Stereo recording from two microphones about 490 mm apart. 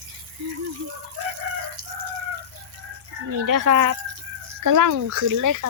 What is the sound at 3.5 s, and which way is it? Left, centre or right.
Speech, right.